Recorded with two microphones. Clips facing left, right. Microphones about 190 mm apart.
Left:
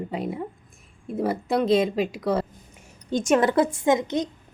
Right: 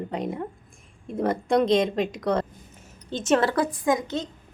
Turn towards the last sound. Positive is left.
turn(degrees=15)  # may be behind; listen again after turning